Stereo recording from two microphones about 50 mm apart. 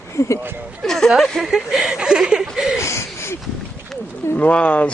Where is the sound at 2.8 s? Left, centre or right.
Left.